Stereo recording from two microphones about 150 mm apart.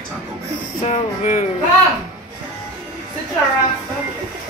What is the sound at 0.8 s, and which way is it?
Speech, 55° left (ahead or behind).